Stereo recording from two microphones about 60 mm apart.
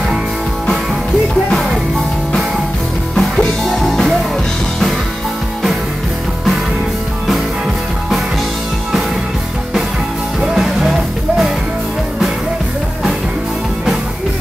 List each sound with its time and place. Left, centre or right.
1.5 s music: centre
3.2 s music: centre
10.4 s music: centre